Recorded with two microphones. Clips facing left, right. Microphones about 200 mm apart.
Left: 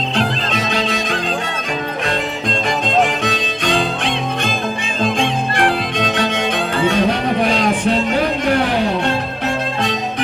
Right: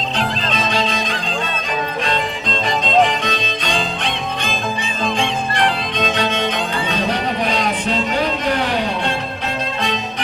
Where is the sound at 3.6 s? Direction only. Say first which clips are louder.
Left 6 dB; 45° left (ahead or behind).